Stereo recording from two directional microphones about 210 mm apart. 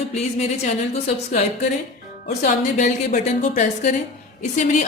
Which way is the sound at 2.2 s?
40° left (ahead or behind).